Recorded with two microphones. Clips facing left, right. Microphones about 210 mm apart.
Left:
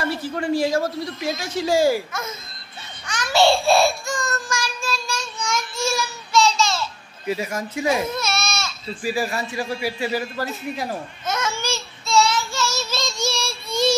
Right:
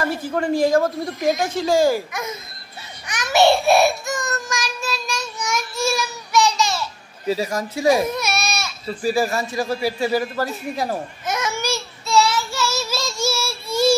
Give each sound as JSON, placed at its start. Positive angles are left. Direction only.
{"t": 0.0, "sound": "a woman's voice", "side_deg": -45}
{"t": 3.1, "sound": "child singing", "side_deg": -20}
{"t": 5.9, "sound": "a sound", "side_deg": -15}
{"t": 7.2, "sound": "a man's voice", "side_deg": -35}
{"t": 8.1, "sound": "baby cry", "side_deg": -15}
{"t": 9.0, "sound": "a man's voice", "side_deg": -40}
{"t": 11.2, "sound": "babbling", "side_deg": -15}
{"t": 12.1, "sound": "child singing", "side_deg": -10}